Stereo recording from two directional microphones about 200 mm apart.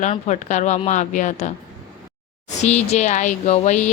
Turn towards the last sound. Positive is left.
turn(degrees=35)  # may be behind; listen again after turning